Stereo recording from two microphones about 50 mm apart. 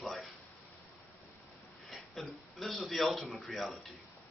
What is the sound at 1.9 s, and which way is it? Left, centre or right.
A man's voice, centre.